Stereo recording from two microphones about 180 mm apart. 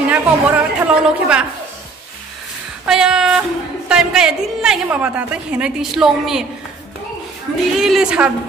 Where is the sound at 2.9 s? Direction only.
5° right (ahead or behind).